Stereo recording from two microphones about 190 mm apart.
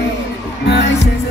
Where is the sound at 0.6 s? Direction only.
65° left (ahead or behind).